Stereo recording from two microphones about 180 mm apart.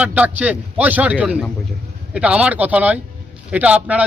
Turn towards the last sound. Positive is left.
turn(degrees=-5)  # may be behind; listen again after turning